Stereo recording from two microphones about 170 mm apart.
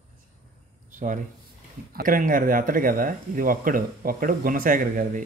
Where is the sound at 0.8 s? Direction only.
50° right (ahead or behind).